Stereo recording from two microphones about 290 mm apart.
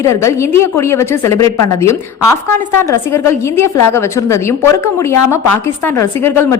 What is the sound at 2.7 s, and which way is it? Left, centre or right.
A woman's voice, centre.